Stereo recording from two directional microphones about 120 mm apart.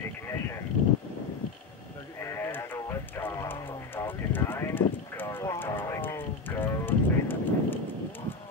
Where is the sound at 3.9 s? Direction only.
20° left (ahead or behind).